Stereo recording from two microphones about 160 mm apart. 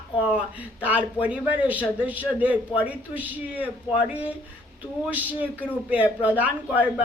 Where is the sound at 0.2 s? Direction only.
10° right (ahead or behind).